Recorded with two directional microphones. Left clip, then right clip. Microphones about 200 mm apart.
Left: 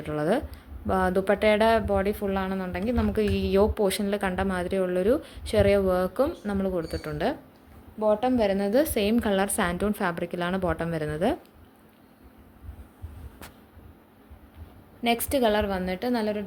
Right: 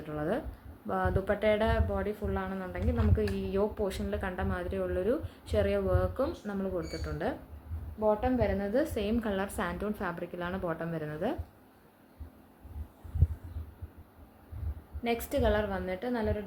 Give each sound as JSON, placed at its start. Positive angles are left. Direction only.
{"t": 0.0, "sound": "a woman's voice", "side_deg": 45}
{"t": 15.0, "sound": "a woman's voice", "side_deg": 45}